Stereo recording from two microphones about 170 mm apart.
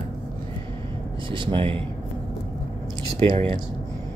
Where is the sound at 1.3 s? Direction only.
30° right (ahead or behind).